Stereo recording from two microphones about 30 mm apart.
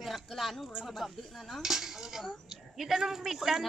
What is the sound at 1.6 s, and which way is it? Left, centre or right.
Speech, centre.